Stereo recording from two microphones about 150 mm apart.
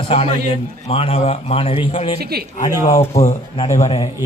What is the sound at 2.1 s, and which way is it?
Speech, 90° right.